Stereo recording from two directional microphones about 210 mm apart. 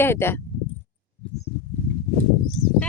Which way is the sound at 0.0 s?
10° left (ahead or behind).